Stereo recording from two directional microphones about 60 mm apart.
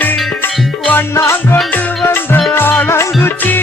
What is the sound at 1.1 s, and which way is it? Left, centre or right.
Music, left.